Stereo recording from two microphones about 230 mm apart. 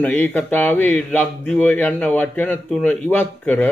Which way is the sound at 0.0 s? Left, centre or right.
Centre.